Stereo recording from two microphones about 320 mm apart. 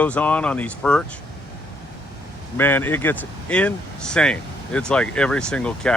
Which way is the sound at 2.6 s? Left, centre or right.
Centre.